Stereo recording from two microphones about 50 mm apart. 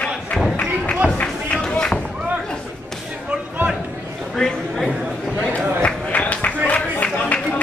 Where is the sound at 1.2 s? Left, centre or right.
Centre.